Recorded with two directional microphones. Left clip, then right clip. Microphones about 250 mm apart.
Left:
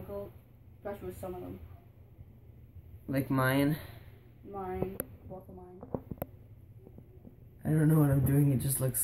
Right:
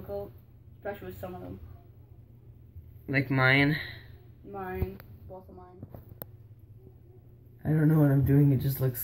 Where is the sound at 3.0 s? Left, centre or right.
Centre.